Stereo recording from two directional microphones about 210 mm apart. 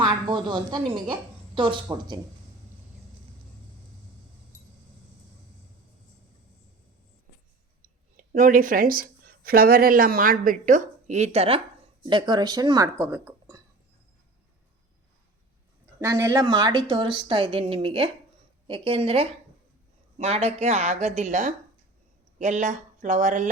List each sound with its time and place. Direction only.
0.0 s a woman's voice: 20° right (ahead or behind)
8.1 s speech: 40° right (ahead or behind); by 13.6 s 15° right (ahead or behind)
16.0 s a woman's voice: 10° right (ahead or behind); by 23.5 s 35° right (ahead or behind)